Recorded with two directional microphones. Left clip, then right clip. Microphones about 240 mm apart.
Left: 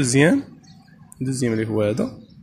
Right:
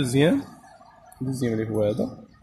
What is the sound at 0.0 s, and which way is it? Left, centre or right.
Speech, centre.